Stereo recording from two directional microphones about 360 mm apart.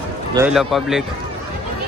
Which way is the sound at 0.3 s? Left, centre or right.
Centre.